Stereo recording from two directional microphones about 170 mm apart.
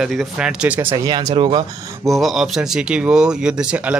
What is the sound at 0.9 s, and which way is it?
Speech, 25° right (ahead or behind).